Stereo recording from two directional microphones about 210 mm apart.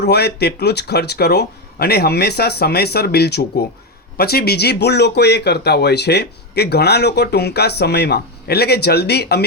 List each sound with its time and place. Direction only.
0.0 s speech: 50° left (ahead or behind)